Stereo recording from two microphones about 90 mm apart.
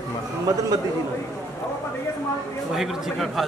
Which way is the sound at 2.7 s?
5° right (ahead or behind).